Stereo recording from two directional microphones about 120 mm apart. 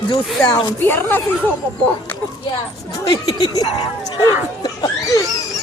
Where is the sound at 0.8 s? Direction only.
15° left (ahead or behind).